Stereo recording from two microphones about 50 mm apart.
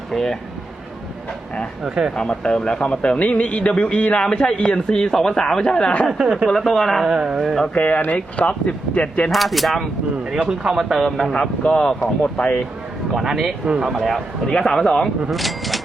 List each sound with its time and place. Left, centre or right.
0.1 s a man's voice: centre
1.8 s speech: centre
2.1 s a man's voice: centre
6.2 s speech: centre
6.6 s speech: centre
7.1 s speech: centre
7.7 s speech: left
9.3 s speech: centre
10.2 s speech: centre
11.2 s a man's voice: centre
13.1 s speech: centre
13.9 s speech: centre
14.4 s a man's voice: centre